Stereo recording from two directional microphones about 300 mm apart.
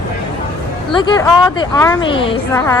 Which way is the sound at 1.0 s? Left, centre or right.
Centre.